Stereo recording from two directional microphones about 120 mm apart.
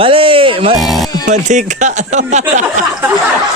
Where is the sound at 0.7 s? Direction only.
Centre (ahead or behind).